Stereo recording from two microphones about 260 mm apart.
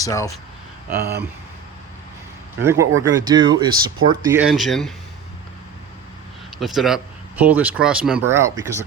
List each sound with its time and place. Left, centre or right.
0.0 s speech: centre
0.9 s speech: right
2.6 s speech: centre
6.6 s speech: centre